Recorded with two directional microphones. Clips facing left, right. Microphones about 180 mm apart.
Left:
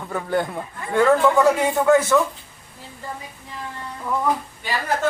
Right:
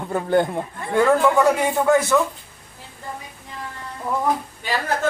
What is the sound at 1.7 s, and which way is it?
Speech, 15° right (ahead or behind).